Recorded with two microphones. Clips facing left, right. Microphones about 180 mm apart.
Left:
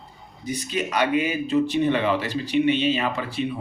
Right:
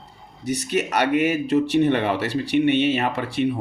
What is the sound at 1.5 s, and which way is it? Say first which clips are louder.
Speech: right 1 dB; 70° right (ahead or behind).